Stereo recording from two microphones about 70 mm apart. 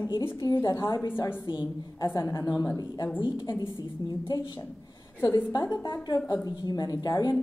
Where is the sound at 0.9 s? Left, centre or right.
Left.